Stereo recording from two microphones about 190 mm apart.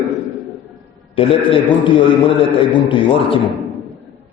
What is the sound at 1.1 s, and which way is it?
A man's voice, 25° left (ahead or behind).